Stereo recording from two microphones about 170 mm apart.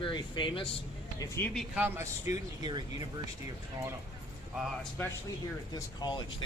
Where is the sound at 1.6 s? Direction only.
10° right (ahead or behind); by 2.8 s 25° right (ahead or behind).